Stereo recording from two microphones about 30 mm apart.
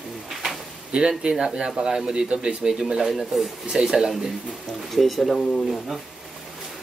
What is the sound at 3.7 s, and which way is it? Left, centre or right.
Speech, right.